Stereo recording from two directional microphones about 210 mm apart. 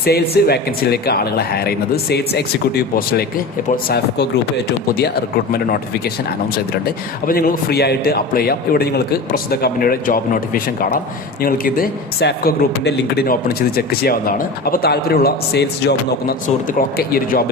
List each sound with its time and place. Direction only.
0.0 s speech: 50° left (ahead or behind)
6.8 s speech: 45° left (ahead or behind)